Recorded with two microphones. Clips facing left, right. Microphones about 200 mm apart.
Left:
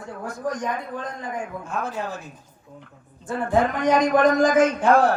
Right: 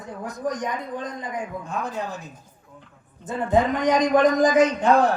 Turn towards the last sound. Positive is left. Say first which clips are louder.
# even
turn(degrees=-20)  # may be behind; listen again after turning